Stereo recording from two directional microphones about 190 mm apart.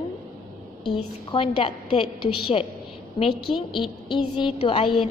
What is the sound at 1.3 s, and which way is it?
A woman's voice, 25° left (ahead or behind).